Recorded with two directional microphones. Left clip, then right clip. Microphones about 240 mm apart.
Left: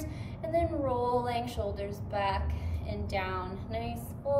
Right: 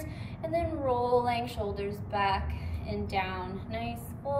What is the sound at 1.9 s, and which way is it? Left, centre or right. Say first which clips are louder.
Female singing: right 4 dB; centre.